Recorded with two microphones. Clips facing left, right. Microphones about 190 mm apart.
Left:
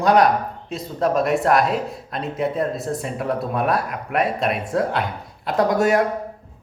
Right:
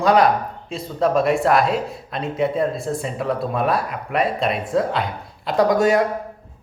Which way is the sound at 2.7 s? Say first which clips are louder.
Right 1 dB; 30° right (ahead or behind).